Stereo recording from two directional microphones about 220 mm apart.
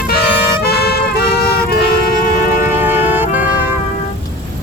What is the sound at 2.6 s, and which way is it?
Music, 10° right (ahead or behind).